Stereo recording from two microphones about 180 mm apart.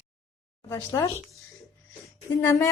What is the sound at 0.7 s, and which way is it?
Speech, 20° left (ahead or behind).